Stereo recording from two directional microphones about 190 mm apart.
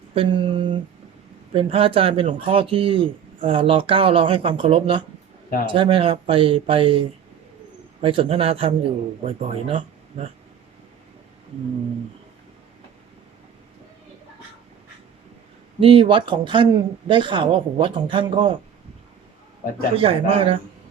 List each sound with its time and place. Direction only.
0.1 s a sound: 25° right (ahead or behind)
1.5 s speech: 30° right (ahead or behind)
8.0 s speech: 30° right (ahead or behind)
15.8 s speech: 30° right (ahead or behind)
20.0 s speech: 30° right (ahead or behind)